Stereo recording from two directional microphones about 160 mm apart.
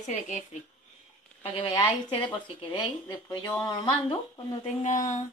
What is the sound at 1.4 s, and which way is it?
Speech, 35° left (ahead or behind).